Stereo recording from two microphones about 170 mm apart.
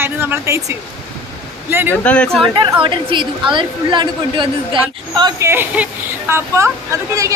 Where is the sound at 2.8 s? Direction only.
30° right (ahead or behind).